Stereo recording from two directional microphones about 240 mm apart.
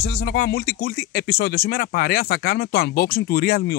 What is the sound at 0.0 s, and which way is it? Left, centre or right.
Speech, left.